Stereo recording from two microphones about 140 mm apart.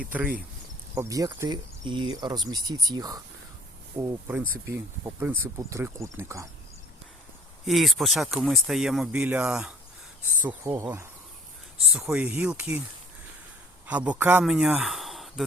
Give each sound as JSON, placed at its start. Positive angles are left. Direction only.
{"t": 0.0, "sound": "speech", "side_deg": -10}
{"t": 0.9, "sound": "speech", "side_deg": -25}
{"t": 4.6, "sound": "speech", "side_deg": -20}
{"t": 7.6, "sound": "speech", "side_deg": 0}
{"t": 10.4, "sound": "speech", "side_deg": -15}
{"t": 11.8, "sound": "speech", "side_deg": 0}
{"t": 13.8, "sound": "speech", "side_deg": -10}